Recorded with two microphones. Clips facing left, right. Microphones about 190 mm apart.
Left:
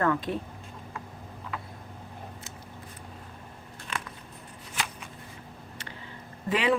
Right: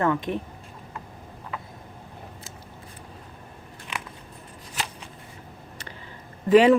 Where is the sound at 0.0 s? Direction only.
20° right (ahead or behind).